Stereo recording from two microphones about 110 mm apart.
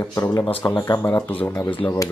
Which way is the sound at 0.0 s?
25° left (ahead or behind).